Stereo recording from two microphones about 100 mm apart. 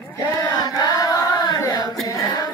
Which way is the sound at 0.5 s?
40° left (ahead or behind).